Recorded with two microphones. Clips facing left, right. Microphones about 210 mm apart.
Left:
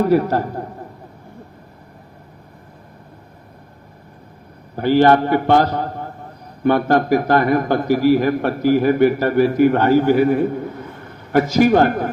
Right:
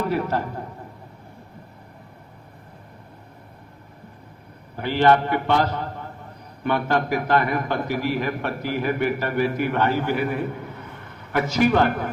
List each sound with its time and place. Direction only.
0.0 s a man's voice: 40° left (ahead or behind)
4.8 s a man's voice: 40° left (ahead or behind)